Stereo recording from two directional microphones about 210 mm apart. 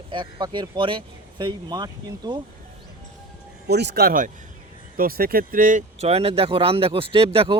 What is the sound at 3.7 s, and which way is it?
Speech, 50° right (ahead or behind).